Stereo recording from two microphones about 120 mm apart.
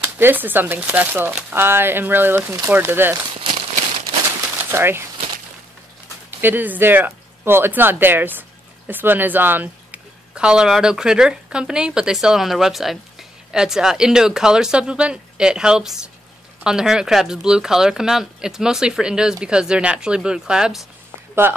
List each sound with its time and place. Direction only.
0.2 s speech: 15° right (ahead or behind)
4.6 s speech: 20° right (ahead or behind)
6.4 s speech: 15° right (ahead or behind)